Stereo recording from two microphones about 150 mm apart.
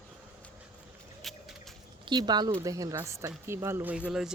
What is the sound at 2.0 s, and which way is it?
Speech, 30° right (ahead or behind).